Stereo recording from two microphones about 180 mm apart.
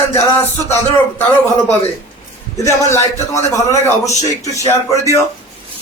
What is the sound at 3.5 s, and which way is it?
Speech, 15° left (ahead or behind).